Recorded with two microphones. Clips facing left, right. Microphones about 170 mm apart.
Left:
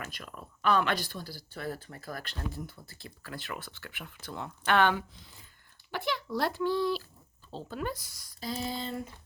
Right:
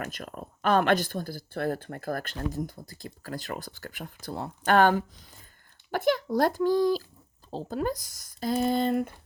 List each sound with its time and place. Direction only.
0.0 s speech: 45° right (ahead or behind)